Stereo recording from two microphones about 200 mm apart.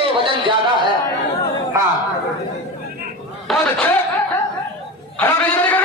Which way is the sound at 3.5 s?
5° left (ahead or behind).